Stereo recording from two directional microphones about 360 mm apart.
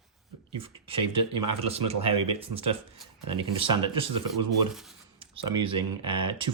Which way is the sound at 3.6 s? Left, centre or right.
Centre.